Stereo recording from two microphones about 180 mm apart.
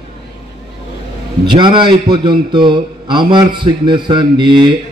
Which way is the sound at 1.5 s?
25° right (ahead or behind).